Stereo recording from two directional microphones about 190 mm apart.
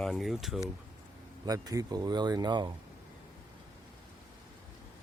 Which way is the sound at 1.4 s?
20° right (ahead or behind).